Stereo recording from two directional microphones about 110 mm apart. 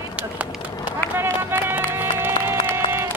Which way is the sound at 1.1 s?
20° right (ahead or behind).